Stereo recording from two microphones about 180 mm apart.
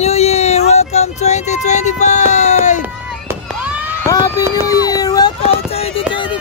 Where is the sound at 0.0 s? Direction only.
35° left (ahead or behind).